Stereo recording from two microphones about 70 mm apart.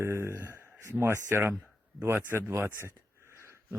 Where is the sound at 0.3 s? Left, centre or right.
Right.